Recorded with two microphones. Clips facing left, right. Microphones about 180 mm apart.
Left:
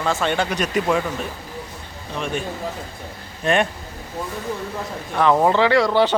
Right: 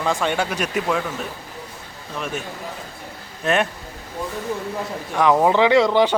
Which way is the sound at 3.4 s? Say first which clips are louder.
Left 1 dB; centre (ahead or behind).